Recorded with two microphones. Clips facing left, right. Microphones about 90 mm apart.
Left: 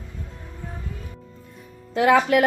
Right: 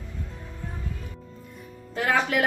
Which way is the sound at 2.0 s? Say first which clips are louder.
Left 7 dB; 65° left (ahead or behind).